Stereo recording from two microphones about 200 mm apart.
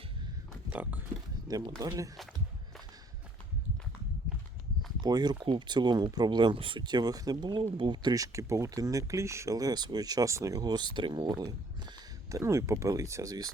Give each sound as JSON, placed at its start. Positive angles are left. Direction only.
{"t": 0.7, "sound": "speech", "side_deg": -5}
{"t": 1.8, "sound": "speech", "side_deg": -20}
{"t": 4.9, "sound": "speech", "side_deg": -20}